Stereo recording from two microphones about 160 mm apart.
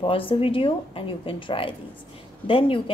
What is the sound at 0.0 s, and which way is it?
Speech, 35° left (ahead or behind).